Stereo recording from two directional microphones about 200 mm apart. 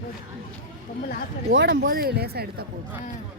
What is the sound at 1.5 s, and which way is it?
Speech, 50° right (ahead or behind).